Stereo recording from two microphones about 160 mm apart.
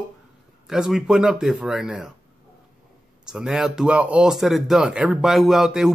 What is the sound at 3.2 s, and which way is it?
Speech, 5° right (ahead or behind).